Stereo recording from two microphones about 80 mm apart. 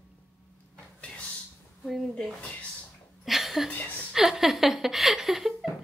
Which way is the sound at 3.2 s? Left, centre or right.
Centre.